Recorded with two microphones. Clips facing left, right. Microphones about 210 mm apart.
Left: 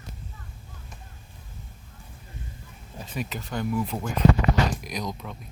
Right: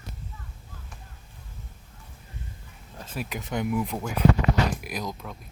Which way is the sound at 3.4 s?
20° right (ahead or behind).